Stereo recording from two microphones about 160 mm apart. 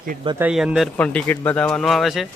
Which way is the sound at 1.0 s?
10° left (ahead or behind).